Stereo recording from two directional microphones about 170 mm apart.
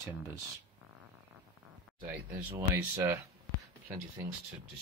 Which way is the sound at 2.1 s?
15° right (ahead or behind).